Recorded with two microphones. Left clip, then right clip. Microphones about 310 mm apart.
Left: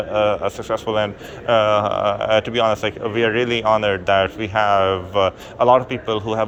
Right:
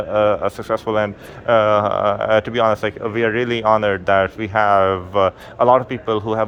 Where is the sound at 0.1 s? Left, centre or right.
Right.